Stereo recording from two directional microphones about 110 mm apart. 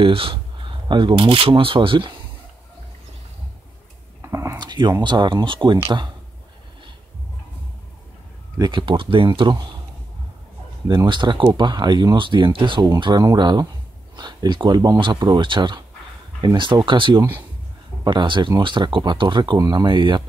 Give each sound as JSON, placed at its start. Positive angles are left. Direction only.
{"t": 0.0, "sound": "speech", "side_deg": -55}
{"t": 4.2, "sound": "a sound", "side_deg": -25}
{"t": 4.6, "sound": "a sound", "side_deg": -40}
{"t": 5.0, "sound": "speech", "side_deg": -45}
{"t": 8.5, "sound": "speech", "side_deg": -45}
{"t": 11.1, "sound": "speech", "side_deg": -45}